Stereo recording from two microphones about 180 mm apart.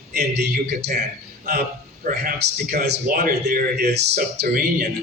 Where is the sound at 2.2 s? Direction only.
55° right (ahead or behind).